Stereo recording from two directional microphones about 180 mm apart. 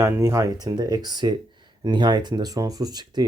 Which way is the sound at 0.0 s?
15° right (ahead or behind).